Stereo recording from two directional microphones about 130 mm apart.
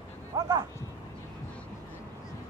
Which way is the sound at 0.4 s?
30° right (ahead or behind).